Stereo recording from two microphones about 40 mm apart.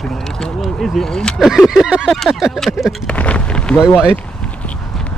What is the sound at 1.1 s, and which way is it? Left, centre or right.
Speech, centre.